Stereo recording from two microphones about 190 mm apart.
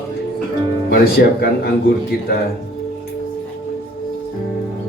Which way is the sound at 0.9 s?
55° left (ahead or behind).